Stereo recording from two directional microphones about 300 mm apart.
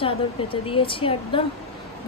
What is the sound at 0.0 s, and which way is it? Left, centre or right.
Speech, centre.